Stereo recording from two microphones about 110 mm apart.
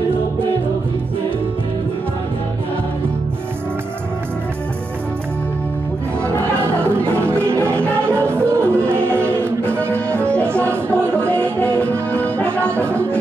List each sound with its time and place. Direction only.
7.0 s music: 20° right (ahead or behind)
9.9 s music: 10° left (ahead or behind)